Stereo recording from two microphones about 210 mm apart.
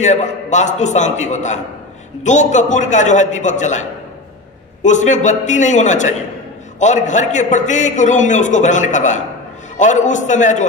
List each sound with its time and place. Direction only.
0.0 s a man's voice: 35° left (ahead or behind)
4.8 s a man's voice: 35° left (ahead or behind)